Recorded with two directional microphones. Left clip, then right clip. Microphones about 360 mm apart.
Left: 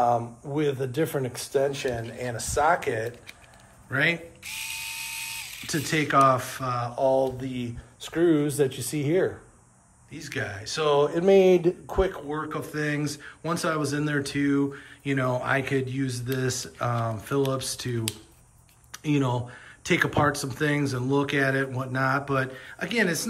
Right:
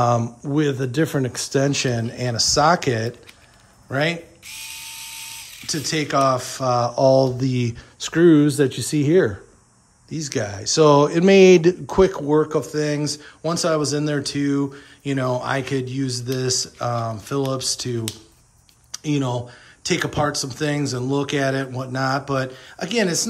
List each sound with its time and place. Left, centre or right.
0.6 s a man's voice: right
3.9 s speech: centre; by 9.3 s right
10.1 s speech: centre